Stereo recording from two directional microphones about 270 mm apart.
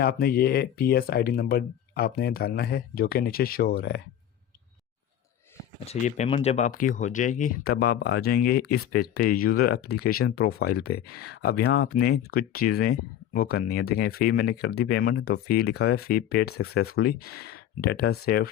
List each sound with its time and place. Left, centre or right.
0.0 s speech: left
5.8 s speech: left